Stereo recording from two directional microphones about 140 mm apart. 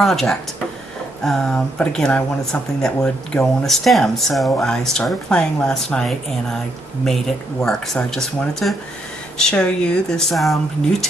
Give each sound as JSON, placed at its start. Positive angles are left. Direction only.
{"t": 0.0, "sound": "speech", "side_deg": 0}
{"t": 7.6, "sound": "speech", "side_deg": 5}